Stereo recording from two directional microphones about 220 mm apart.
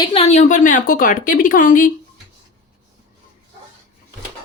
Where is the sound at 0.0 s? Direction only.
25° left (ahead or behind).